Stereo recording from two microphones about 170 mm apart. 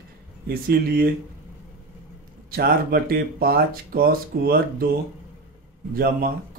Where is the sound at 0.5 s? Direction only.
65° right (ahead or behind).